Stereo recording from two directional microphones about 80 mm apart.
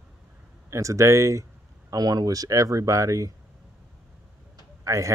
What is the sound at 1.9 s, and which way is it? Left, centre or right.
Speech, right.